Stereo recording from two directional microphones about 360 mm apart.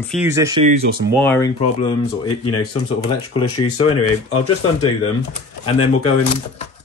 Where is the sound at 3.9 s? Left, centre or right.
Centre.